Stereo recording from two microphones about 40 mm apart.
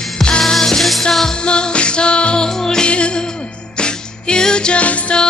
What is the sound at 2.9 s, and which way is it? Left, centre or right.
Music, left.